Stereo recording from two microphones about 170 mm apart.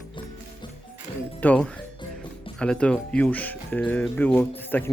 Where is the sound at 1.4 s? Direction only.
10° left (ahead or behind).